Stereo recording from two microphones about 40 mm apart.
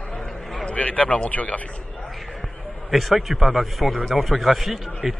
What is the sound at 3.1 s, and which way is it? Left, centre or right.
A man's voice, centre.